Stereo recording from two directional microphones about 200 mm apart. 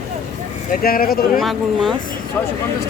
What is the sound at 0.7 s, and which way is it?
Speech, 45° left (ahead or behind).